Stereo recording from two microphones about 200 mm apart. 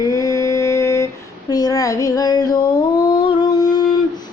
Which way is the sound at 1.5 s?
20° left (ahead or behind).